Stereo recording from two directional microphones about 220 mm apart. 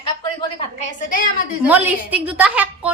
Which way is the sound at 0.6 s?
35° left (ahead or behind).